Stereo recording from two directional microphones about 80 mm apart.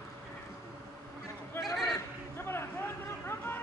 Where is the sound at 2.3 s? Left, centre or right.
Left.